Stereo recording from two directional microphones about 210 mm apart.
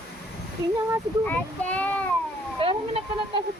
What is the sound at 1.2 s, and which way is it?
Speech, 5° left (ahead or behind).